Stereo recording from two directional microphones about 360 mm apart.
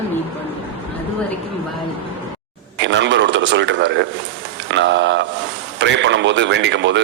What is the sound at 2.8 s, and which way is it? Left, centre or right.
A man's voice, right.